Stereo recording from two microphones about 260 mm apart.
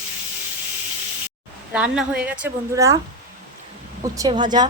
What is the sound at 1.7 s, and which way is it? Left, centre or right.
A woman's voice, centre.